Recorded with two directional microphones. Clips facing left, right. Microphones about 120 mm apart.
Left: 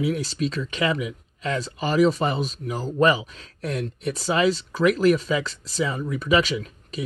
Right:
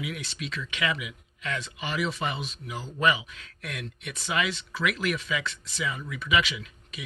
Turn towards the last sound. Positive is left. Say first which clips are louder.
# left 11 dB
turn(degrees=40)  # may be behind; listen again after turning